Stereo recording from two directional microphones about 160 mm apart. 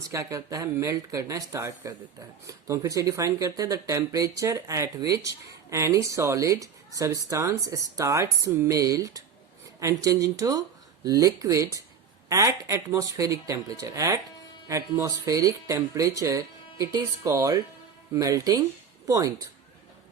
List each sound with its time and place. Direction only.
0.1 s speech: 20° right (ahead or behind)